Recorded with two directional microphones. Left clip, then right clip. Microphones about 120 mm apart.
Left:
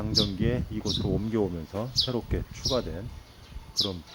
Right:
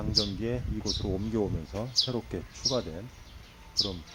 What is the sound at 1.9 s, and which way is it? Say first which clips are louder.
Speech: left 1 dB; 15° left (ahead or behind).